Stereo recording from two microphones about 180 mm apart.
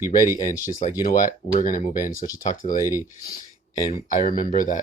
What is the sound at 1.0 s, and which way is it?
Speech, 50° left (ahead or behind).